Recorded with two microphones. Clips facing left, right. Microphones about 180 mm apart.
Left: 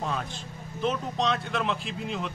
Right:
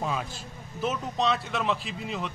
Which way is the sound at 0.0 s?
5° right (ahead or behind).